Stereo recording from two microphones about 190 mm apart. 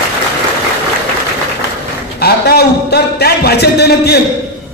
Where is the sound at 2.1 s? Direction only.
55° left (ahead or behind).